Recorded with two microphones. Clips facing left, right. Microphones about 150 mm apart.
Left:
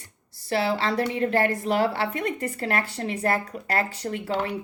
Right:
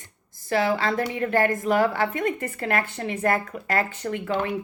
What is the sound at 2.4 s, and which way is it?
Speech, 40° left (ahead or behind).